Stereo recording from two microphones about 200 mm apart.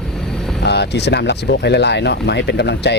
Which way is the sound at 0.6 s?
55° left (ahead or behind).